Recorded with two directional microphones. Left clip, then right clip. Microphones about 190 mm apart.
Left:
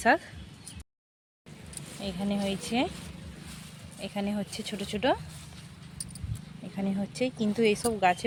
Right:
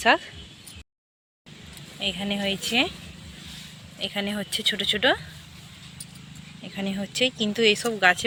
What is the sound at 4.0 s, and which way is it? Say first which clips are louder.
Speech: right 6 dB; 5° right (ahead or behind).